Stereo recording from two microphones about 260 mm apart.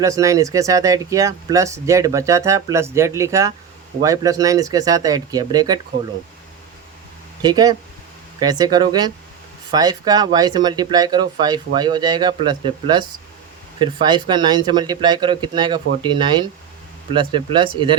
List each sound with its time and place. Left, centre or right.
0.0 s speech: centre
7.4 s speech: centre